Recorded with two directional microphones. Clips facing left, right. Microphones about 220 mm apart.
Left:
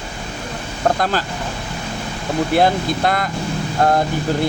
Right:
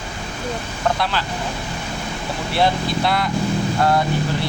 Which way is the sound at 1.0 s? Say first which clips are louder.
Left 3 dB; 45° left (ahead or behind).